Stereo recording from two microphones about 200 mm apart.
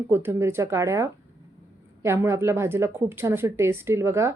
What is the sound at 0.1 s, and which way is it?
A woman's voice, 10° right (ahead or behind).